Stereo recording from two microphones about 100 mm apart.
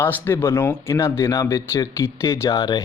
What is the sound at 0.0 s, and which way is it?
A man's voice, 20° left (ahead or behind).